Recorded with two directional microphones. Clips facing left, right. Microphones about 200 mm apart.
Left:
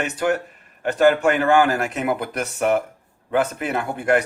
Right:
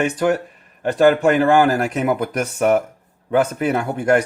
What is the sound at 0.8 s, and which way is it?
Speech, 35° right (ahead or behind).